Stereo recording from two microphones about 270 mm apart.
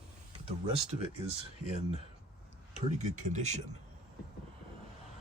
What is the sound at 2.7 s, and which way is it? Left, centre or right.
Speech, right.